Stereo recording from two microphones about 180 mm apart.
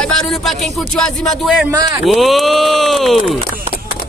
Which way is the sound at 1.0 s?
Centre (ahead or behind).